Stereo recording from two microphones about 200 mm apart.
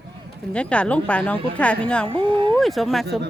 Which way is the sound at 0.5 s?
5° left (ahead or behind).